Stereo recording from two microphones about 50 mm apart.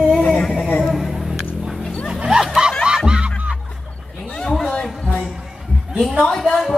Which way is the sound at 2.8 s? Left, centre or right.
Centre.